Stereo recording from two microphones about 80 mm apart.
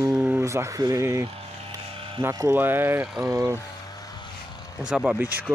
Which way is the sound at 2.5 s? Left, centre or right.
Right.